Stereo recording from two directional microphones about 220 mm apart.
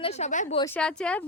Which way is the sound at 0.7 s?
5° left (ahead or behind).